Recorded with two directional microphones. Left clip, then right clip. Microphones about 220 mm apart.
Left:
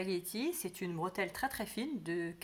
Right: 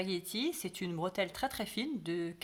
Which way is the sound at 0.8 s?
60° right (ahead or behind).